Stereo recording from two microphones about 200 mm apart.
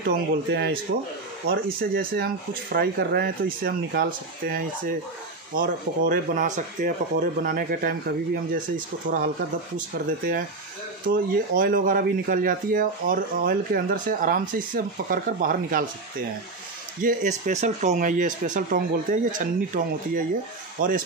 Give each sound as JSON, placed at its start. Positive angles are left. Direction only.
{"t": 0.0, "sound": "speech", "side_deg": -55}
{"t": 17.0, "sound": "speech", "side_deg": -35}